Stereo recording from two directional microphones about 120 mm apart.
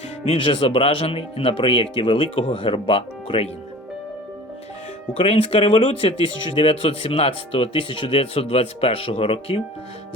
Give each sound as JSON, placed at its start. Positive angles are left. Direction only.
{"t": 0.3, "sound": "speech", "side_deg": 50}
{"t": 5.1, "sound": "speech", "side_deg": 55}